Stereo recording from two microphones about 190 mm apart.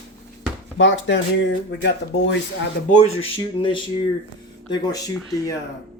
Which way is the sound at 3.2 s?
30° left (ahead or behind).